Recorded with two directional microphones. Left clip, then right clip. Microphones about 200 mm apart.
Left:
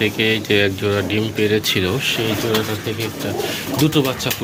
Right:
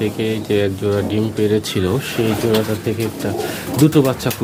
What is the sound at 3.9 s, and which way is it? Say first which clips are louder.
Speech: right 3 dB; 40° right (ahead or behind).